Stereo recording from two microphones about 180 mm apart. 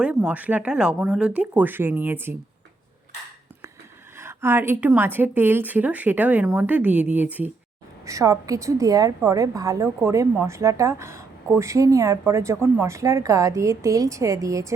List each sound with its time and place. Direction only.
0.0 s a woman's voice: 5° right (ahead or behind)
4.2 s a woman's voice: 15° right (ahead or behind)